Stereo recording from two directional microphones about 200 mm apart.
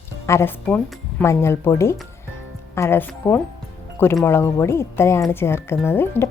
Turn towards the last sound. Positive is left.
turn(degrees=10)  # may be behind; listen again after turning